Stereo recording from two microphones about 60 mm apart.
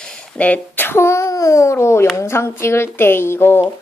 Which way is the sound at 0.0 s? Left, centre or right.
Left.